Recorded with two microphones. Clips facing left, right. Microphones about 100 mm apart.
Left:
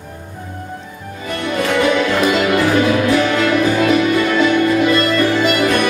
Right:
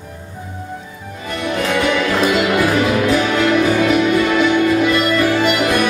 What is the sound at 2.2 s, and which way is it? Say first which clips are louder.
Music: even; 10° right (ahead or behind).